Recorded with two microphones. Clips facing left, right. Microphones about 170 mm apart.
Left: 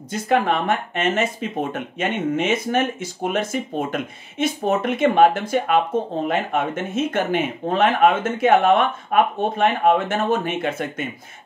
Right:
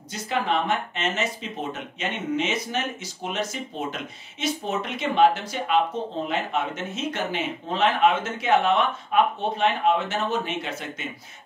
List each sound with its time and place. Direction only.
0.1 s speech: 50° left (ahead or behind)